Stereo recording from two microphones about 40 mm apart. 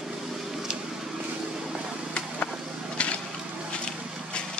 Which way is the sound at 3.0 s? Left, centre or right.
Left.